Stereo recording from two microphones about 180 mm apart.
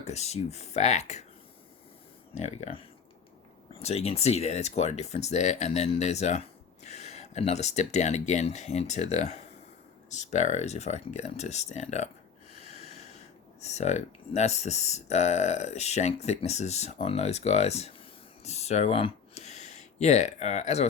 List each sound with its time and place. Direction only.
0.0 s speech: 35° left (ahead or behind)
2.3 s speech: 40° left (ahead or behind)